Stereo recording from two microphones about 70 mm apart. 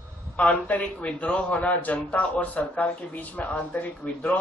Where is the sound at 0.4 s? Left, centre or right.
Centre.